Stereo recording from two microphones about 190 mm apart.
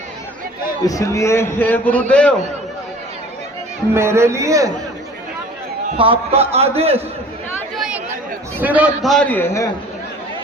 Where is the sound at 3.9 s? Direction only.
15° right (ahead or behind).